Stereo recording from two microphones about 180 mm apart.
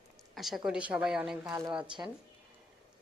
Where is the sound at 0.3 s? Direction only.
Centre (ahead or behind).